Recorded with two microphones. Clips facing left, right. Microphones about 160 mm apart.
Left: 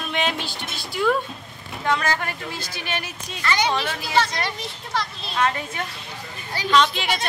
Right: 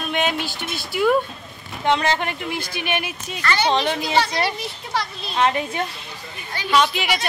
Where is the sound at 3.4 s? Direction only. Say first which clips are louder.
Right 2 dB; 15° left (ahead or behind).